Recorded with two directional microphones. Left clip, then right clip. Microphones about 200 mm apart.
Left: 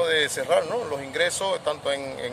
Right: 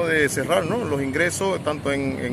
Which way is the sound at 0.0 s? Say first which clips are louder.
Right 2 dB; 5° left (ahead or behind).